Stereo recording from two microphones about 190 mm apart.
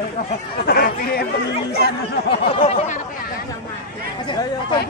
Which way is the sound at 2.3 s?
30° left (ahead or behind).